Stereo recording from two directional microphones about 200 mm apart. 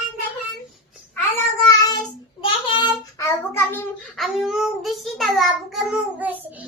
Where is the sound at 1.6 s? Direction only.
20° left (ahead or behind).